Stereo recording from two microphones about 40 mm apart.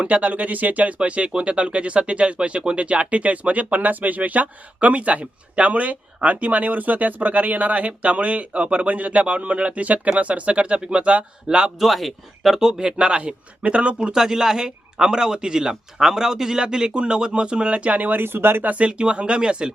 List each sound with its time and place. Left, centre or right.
0.0 s speech: right
0.9 s a man's voice: right
11.8 s speech: centre
13.0 s a man's voice: right
14.1 s speech: centre
15.7 s a man's voice: centre; by 18.0 s right
18.0 s speech: right
18.6 s speech: right
18.9 s a man's voice: right